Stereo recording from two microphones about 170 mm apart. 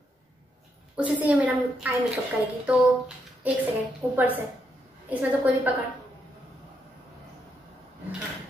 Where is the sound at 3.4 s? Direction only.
10° right (ahead or behind).